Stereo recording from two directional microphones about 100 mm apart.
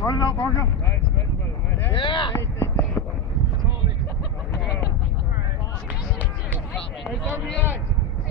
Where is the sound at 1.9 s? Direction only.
55° left (ahead or behind).